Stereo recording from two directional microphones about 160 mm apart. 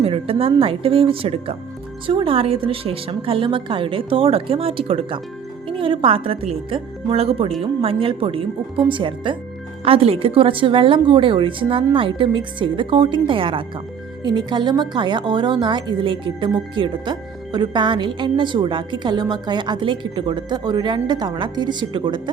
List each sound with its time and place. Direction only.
0.0 s a woman's voice: 35° right (ahead or behind)